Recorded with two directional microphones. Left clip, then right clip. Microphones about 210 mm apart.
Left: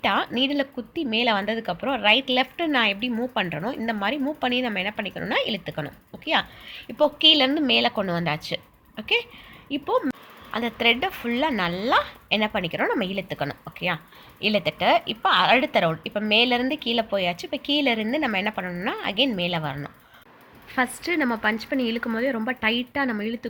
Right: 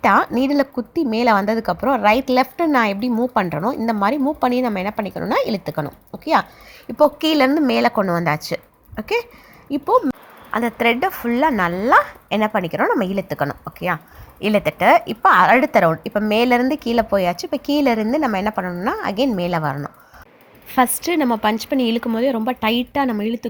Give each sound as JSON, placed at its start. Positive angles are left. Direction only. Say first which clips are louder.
{"t": 0.1, "sound": "speech", "louder": "right 7 dB", "side_deg": -35}
{"t": 1.3, "sound": "a woman's voice", "louder": "right 10 dB", "side_deg": -15}
{"t": 1.5, "sound": "a woman's voice", "louder": "right 8 dB", "side_deg": -35}
{"t": 7.2, "sound": "a woman's voice", "louder": "right 2 dB", "side_deg": -15}
{"t": 10.5, "sound": "a woman's voice", "louder": "right 4 dB", "side_deg": -25}